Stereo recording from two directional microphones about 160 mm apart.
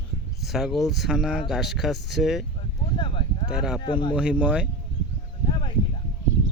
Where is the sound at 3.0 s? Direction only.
35° left (ahead or behind).